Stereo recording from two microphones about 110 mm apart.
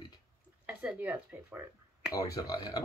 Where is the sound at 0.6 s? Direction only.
10° right (ahead or behind).